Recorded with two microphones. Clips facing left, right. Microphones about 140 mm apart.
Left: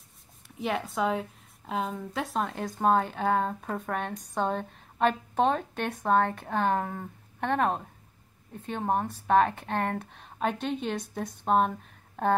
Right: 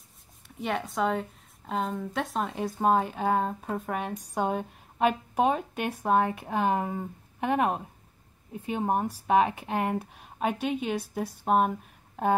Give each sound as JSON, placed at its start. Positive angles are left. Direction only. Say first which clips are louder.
{"t": 0.6, "sound": "speech", "louder": "even", "side_deg": 0}